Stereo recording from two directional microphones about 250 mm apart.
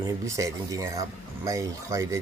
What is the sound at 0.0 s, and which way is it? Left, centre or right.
Speech, centre.